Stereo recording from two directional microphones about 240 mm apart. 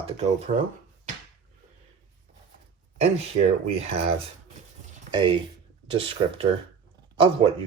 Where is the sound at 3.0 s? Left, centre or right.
Right.